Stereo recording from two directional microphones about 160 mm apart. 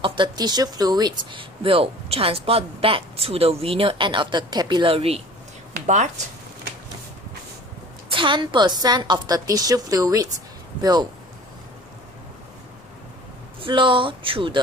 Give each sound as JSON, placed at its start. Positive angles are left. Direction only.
{"t": 0.0, "sound": "speech", "side_deg": -30}
{"t": 8.1, "sound": "a woman's voice", "side_deg": -30}
{"t": 13.6, "sound": "speech", "side_deg": -30}